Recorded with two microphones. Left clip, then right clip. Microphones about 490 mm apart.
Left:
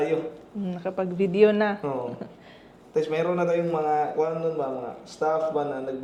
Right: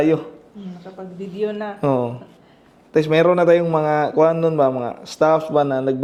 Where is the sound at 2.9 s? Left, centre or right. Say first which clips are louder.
Right 10 dB; right.